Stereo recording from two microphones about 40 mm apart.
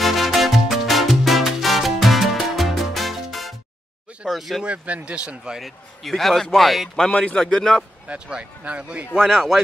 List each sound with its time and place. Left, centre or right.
0.0 s music: centre
4.3 s speech: centre
4.6 s speech: right
5.6 s speech: centre
7.1 s a man's voice: left
7.3 s speech: centre
8.1 s speech: right
9.2 s speech: centre